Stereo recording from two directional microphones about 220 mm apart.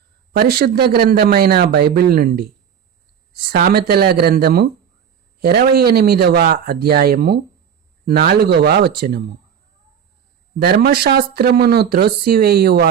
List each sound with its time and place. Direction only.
0.3 s speech: 45° right (ahead or behind)
10.6 s speech: 45° right (ahead or behind)